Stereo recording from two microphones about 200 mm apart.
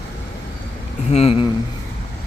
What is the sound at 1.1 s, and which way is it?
Speech, 30° left (ahead or behind).